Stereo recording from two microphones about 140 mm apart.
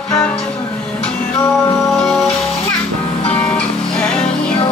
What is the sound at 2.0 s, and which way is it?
Music, 5° left (ahead or behind).